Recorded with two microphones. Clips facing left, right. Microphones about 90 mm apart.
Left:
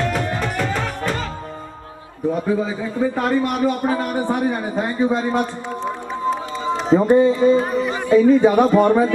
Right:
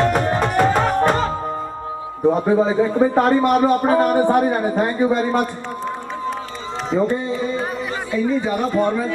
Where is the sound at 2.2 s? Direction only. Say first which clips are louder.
Right 4 dB; 35° right (ahead or behind).